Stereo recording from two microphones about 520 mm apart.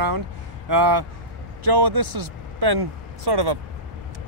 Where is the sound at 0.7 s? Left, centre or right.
Right.